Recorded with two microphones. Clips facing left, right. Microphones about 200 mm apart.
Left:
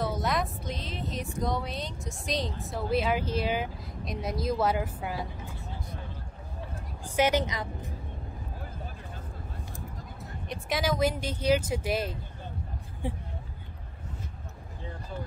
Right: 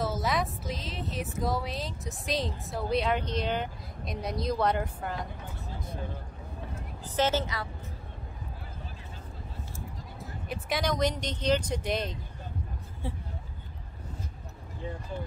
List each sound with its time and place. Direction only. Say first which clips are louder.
0.0 s speech: even; centre (ahead or behind)
7.2 s speech: left 2 dB; 15° left (ahead or behind)
10.5 s speech: left 1 dB; centre (ahead or behind)